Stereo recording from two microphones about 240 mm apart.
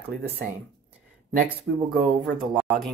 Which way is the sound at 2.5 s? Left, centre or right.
Centre.